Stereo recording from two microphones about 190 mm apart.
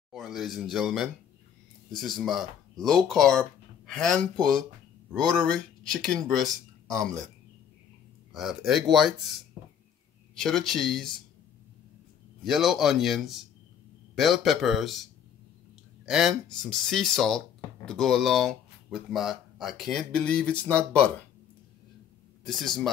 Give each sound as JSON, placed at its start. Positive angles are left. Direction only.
{"t": 0.1, "sound": "speech", "side_deg": 0}
{"t": 6.9, "sound": "speech", "side_deg": -15}
{"t": 8.3, "sound": "speech", "side_deg": 0}
{"t": 10.4, "sound": "speech", "side_deg": 0}
{"t": 12.4, "sound": "speech", "side_deg": 0}
{"t": 16.1, "sound": "speech", "side_deg": -5}
{"t": 22.4, "sound": "speech", "side_deg": 0}